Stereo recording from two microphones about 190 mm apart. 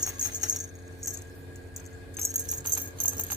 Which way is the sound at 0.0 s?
20° right (ahead or behind).